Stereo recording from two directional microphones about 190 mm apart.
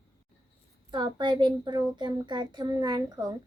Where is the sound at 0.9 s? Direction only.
25° right (ahead or behind).